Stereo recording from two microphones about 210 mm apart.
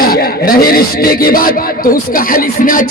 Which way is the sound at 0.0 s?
45° left (ahead or behind).